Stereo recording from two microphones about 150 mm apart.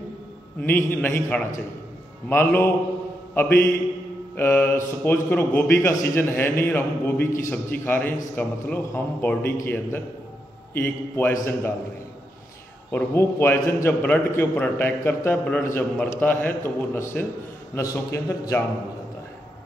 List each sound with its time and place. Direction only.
0.6 s a man's voice: 10° left (ahead or behind)
10.7 s a man's voice: 15° left (ahead or behind)
12.9 s a man's voice: 15° left (ahead or behind)